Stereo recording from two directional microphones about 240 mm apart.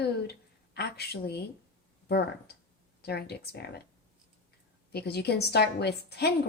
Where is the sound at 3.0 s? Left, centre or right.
Left.